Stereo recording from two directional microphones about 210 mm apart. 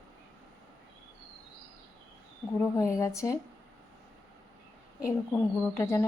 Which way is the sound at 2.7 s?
15° left (ahead or behind).